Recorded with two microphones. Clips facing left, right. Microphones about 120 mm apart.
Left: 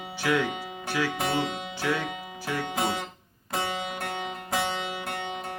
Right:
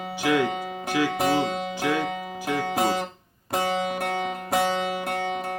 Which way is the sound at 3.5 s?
40° right (ahead or behind).